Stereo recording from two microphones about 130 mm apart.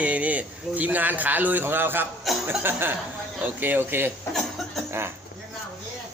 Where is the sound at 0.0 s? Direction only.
10° right (ahead or behind).